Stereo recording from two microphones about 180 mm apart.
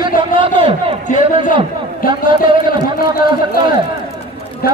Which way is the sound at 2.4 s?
25° right (ahead or behind).